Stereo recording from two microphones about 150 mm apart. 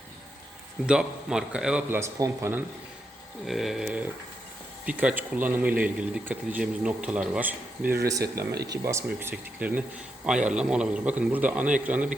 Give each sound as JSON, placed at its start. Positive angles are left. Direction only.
{"t": 0.9, "sound": "speech", "side_deg": -5}
{"t": 3.4, "sound": "speech", "side_deg": 0}
{"t": 9.0, "sound": "speech", "side_deg": -10}